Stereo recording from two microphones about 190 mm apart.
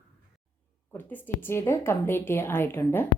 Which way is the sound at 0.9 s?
10° left (ahead or behind).